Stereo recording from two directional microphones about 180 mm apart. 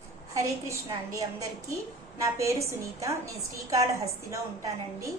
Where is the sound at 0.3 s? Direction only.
15° right (ahead or behind).